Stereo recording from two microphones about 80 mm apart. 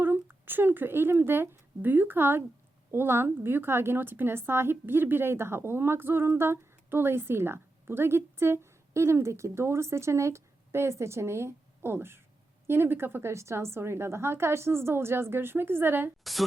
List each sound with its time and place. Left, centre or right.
0.0 s a woman's voice: right
16.2 s a woman's voice: centre